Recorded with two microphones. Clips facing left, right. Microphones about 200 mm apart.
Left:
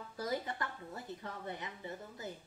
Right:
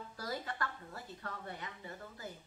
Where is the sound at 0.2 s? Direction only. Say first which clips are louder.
Left 3 dB; 20° left (ahead or behind).